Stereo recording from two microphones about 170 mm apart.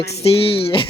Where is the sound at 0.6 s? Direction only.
30° left (ahead or behind).